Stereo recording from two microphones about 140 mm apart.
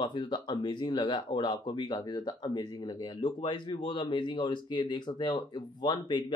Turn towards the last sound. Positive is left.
turn(degrees=35)  # may be behind; listen again after turning